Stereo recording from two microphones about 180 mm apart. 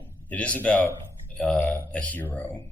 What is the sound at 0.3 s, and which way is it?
Speech, 10° left (ahead or behind).